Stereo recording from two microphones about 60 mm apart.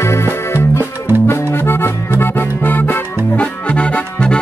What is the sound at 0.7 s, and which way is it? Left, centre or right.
Music, right.